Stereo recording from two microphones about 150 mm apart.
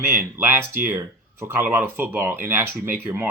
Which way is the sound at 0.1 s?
15° right (ahead or behind).